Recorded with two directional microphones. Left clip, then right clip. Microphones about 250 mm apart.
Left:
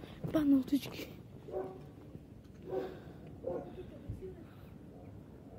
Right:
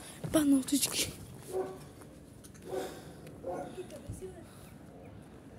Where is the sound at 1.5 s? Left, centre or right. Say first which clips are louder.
Right 4 dB; left.